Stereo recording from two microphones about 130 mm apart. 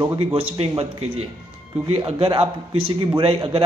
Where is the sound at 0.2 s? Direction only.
50° right (ahead or behind).